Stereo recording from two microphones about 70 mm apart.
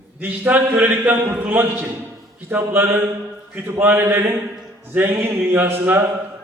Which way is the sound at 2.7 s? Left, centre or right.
Right.